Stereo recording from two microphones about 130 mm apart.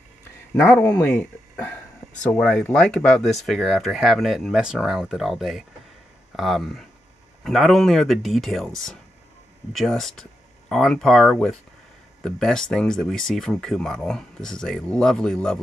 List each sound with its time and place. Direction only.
0.6 s speech: 20° left (ahead or behind)
2.3 s speech: 5° left (ahead or behind)